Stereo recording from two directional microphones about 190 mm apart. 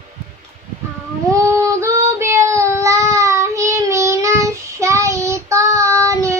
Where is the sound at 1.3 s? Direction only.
15° right (ahead or behind).